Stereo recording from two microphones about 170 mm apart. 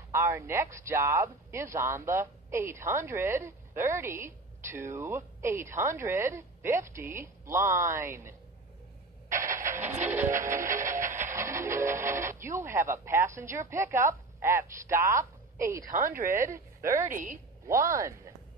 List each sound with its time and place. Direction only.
0.1 s speech: 15° right (ahead or behind)
9.3 s a sound: 50° right (ahead or behind)
10.0 s music: 10° right (ahead or behind)
10.7 s music: 50° right (ahead or behind)
11.2 s speech: 15° right (ahead or behind)
15.8 s speech: 55° right (ahead or behind)
17.6 s speech: 15° right (ahead or behind)